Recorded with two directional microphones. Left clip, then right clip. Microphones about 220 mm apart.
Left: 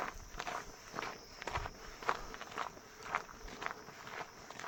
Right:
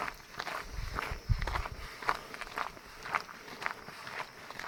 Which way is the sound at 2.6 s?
60° right (ahead or behind).